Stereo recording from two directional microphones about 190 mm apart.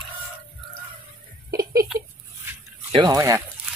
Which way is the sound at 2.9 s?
20° right (ahead or behind).